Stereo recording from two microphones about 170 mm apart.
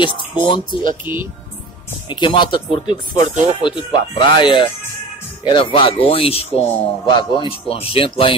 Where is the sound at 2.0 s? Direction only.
25° left (ahead or behind).